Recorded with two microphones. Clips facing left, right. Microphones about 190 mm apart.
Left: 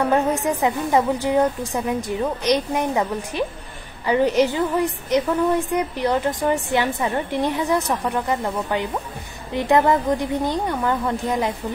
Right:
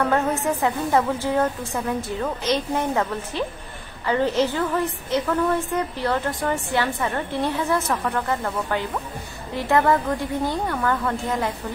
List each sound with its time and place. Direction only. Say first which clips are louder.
0.0 s a woman's voice: left 2 dB; 15° left (ahead or behind)